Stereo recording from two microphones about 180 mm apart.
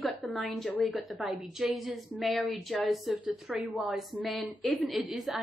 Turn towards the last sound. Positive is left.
turn(degrees=0)  # may be behind; listen again after turning